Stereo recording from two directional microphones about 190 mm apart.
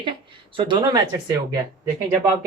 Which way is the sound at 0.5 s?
25° right (ahead or behind).